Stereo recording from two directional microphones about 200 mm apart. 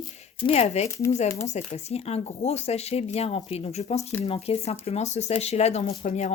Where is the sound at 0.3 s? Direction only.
25° left (ahead or behind).